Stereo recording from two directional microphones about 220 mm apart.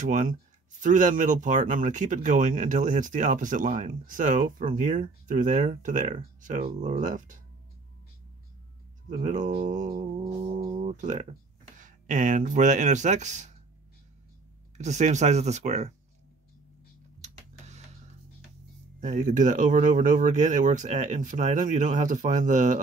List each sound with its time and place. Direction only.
0.0 s speech: 35° right (ahead or behind)
9.1 s speech: 35° right (ahead or behind)
10.3 s a sound: 25° right (ahead or behind)
11.8 s speech: 35° right (ahead or behind)
14.8 s speech: 30° right (ahead or behind)
17.2 s a sound: 30° right (ahead or behind)
18.9 s speech: 35° right (ahead or behind)